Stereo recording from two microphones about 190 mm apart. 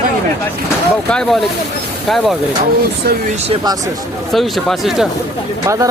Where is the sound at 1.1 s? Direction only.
Centre (ahead or behind).